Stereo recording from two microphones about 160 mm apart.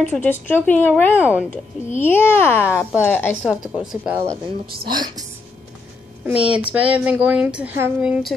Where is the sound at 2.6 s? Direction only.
10° right (ahead or behind).